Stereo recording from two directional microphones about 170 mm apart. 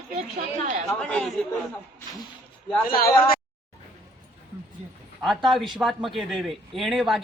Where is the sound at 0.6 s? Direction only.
45° right (ahead or behind).